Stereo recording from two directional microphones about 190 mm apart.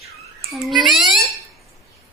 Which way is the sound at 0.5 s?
Centre (ahead or behind).